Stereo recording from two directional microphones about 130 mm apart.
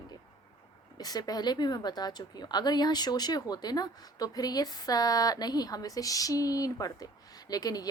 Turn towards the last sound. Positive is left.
turn(degrees=30)  # may be behind; listen again after turning